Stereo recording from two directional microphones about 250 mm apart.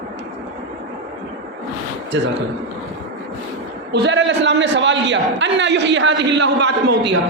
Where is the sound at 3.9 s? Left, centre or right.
Right.